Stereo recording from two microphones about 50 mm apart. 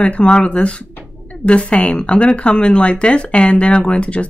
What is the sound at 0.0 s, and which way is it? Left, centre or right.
Speech, left.